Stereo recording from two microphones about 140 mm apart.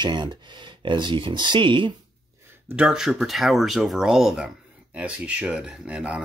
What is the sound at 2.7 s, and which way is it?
Speech, 5° right (ahead or behind).